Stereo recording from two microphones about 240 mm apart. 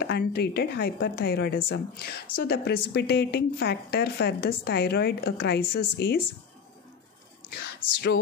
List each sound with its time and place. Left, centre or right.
0.0 s a woman's voice: left
7.4 s speech: left